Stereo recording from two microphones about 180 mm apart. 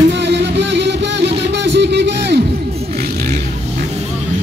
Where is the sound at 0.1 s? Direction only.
75° right (ahead or behind).